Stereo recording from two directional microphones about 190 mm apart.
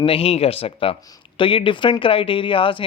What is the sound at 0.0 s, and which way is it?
Speech, 30° left (ahead or behind).